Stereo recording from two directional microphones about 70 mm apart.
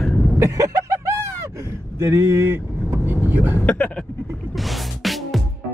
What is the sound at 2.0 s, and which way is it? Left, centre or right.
Speech, right.